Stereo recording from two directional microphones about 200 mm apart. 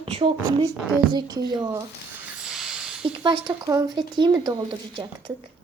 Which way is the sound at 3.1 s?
25° right (ahead or behind).